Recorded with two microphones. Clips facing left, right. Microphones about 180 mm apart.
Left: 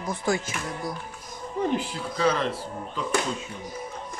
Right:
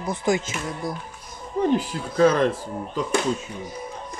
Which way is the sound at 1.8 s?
45° right (ahead or behind).